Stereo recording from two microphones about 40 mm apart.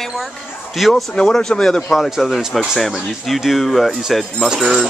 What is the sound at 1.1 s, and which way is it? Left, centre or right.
Speech, centre.